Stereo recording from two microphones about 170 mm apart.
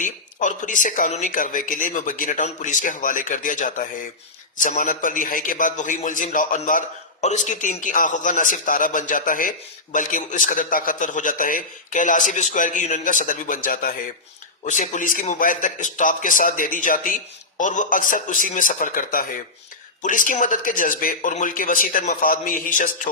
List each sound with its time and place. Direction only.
0.0 s a man's voice: 50° left (ahead or behind)